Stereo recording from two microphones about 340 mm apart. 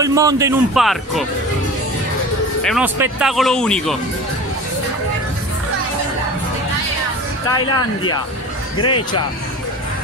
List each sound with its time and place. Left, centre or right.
0.0 s speech: centre
2.6 s speech: centre
7.5 s speech: centre
8.7 s speech: left